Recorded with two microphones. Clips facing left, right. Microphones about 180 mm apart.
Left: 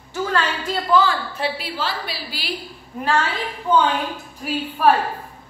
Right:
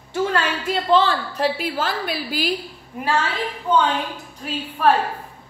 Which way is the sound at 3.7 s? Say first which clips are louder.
Left 1 dB; 5° left (ahead or behind).